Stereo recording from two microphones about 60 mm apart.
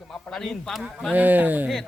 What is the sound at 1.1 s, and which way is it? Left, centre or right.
Speech, right.